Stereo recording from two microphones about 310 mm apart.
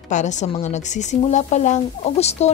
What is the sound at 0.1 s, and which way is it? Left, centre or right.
Speech, left.